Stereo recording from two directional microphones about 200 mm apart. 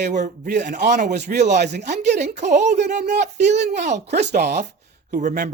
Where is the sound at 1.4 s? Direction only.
35° right (ahead or behind).